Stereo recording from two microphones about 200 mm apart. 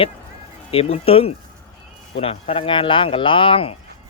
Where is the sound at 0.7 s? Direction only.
30° left (ahead or behind).